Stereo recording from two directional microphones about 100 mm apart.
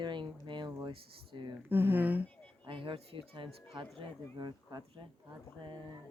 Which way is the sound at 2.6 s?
60° right (ahead or behind).